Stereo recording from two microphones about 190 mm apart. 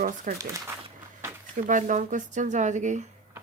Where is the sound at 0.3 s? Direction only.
45° right (ahead or behind).